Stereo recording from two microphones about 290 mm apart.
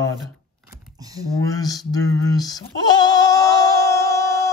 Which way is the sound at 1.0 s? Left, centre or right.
Centre.